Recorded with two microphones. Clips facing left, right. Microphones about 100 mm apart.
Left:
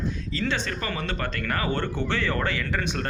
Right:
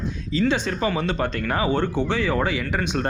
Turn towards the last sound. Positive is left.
turn(degrees=-20)  # may be behind; listen again after turning